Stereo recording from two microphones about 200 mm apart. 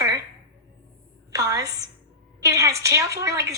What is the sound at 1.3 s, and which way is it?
A woman's voice, 20° right (ahead or behind).